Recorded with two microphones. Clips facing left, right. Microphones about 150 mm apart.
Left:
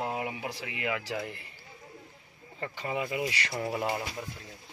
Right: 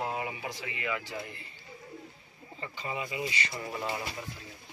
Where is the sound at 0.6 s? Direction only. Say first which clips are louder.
Left 2 dB; 75° left (ahead or behind).